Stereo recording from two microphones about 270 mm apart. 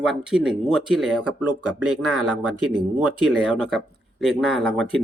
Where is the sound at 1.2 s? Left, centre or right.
Right.